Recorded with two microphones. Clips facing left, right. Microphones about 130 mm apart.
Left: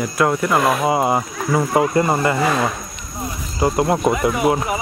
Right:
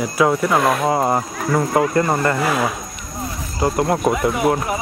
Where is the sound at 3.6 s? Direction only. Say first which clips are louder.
Left 1 dB; 15° left (ahead or behind).